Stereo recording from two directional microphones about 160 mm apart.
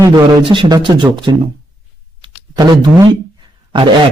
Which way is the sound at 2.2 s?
25° right (ahead or behind).